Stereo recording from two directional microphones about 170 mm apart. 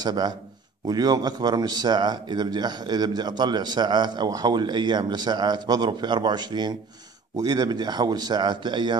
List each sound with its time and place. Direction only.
0.0 s speech: 25° right (ahead or behind)